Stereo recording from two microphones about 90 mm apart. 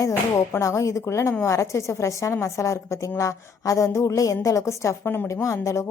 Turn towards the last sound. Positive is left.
turn(degrees=35)  # may be behind; listen again after turning